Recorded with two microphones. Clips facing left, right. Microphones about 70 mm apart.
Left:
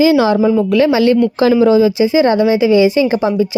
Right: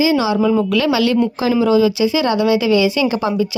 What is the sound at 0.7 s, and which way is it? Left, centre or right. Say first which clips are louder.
A woman's voice: left 4 dB; left.